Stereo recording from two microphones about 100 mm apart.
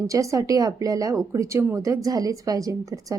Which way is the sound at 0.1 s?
35° right (ahead or behind).